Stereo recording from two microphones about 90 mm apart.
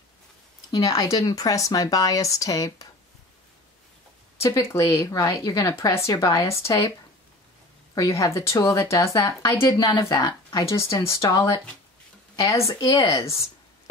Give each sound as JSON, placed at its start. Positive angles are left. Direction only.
{"t": 0.7, "sound": "a woman's voice", "side_deg": 45}
{"t": 4.4, "sound": "a woman's voice", "side_deg": 35}
{"t": 7.9, "sound": "a woman's voice", "side_deg": 40}
{"t": 10.1, "sound": "speech", "side_deg": 50}
{"t": 10.6, "sound": "a woman's voice", "side_deg": 35}